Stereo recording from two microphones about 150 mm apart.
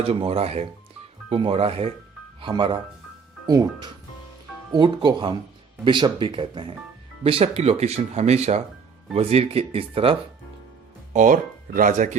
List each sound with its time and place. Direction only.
0.0 s speech: 40° right (ahead or behind)
11.1 s speech: 60° right (ahead or behind)